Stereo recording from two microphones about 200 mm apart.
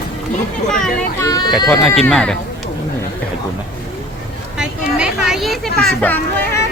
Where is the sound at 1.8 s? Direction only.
Centre (ahead or behind).